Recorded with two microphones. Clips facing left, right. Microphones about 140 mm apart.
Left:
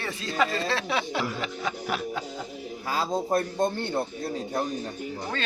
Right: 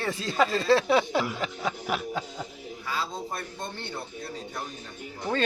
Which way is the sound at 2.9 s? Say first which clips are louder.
Left 6 dB; 45° left (ahead or behind).